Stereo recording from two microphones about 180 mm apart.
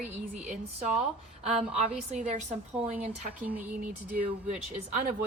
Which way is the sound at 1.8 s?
40° right (ahead or behind).